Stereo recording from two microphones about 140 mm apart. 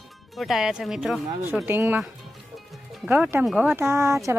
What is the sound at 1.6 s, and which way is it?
Speech, 15° right (ahead or behind).